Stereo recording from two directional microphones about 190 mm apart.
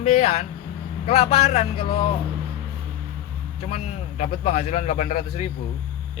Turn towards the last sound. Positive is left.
turn(degrees=35)  # may be behind; listen again after turning